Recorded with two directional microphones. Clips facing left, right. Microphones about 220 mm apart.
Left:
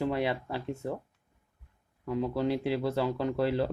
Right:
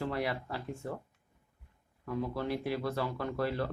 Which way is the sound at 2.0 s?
20° left (ahead or behind).